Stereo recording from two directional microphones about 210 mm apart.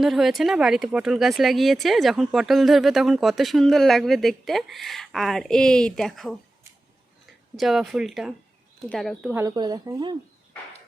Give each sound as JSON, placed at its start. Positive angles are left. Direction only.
{"t": 0.0, "sound": "speech", "side_deg": 0}
{"t": 7.5, "sound": "speech", "side_deg": 0}
{"t": 9.3, "sound": "speech", "side_deg": -15}